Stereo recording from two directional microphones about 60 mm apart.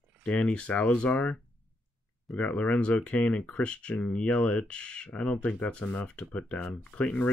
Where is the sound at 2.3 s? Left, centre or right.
Left.